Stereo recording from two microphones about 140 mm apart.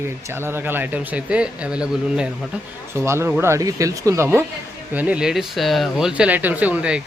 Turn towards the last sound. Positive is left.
turn(degrees=-10)  # may be behind; listen again after turning